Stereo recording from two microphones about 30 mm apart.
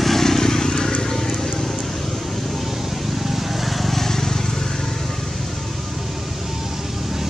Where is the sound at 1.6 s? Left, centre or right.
Centre.